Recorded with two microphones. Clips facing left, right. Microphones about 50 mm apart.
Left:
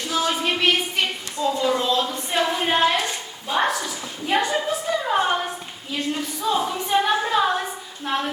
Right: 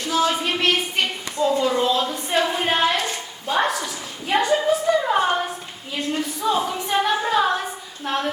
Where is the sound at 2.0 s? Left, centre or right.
Centre.